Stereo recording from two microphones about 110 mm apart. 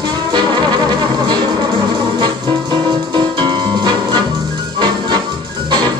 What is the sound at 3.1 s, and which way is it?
Music, 45° right (ahead or behind).